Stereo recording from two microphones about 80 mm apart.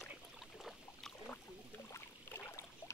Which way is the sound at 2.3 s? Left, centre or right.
Left.